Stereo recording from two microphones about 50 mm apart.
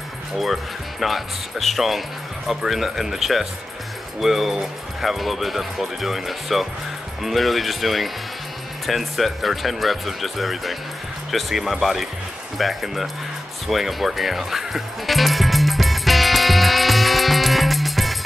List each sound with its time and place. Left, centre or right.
0.4 s speech: centre
13.7 s music: centre